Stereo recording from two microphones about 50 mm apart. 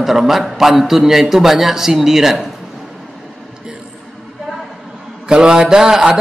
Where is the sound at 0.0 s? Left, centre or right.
Centre.